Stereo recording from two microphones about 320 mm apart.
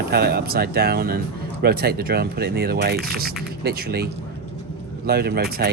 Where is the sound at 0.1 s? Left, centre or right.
Right.